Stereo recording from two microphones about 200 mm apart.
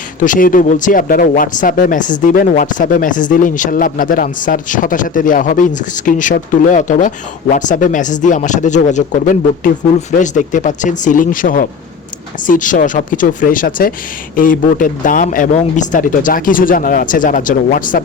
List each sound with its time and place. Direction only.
0.2 s speech: 40° left (ahead or behind)